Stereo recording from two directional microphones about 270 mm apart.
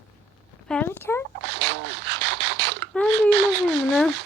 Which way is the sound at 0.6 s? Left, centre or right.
Centre.